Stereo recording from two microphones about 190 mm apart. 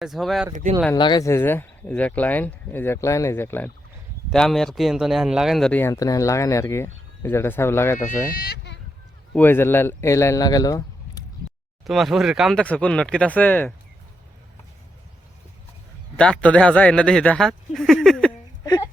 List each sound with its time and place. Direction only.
0.0 s speech: centre (ahead or behind)
0.9 s speech: 25° left (ahead or behind)
7.9 s speech: 40° left (ahead or behind); by 8.8 s 60° left (ahead or behind)
9.3 s speech: 10° left (ahead or behind)
11.9 s speech: centre (ahead or behind)
16.1 s speech: 5° left (ahead or behind)
18.6 s a sound: 20° left (ahead or behind)